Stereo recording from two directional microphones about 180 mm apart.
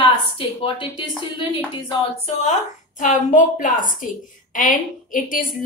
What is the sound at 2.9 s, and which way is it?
A woman's voice, 45° left (ahead or behind).